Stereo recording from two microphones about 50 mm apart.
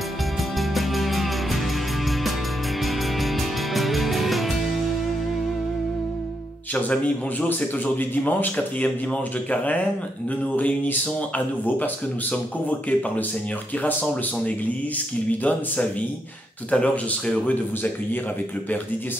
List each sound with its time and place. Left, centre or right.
0.6 s music: centre
2.8 s music: centre
6.7 s speech: left
7.4 s speech: left
8.8 s speech: left
15.4 s speech: left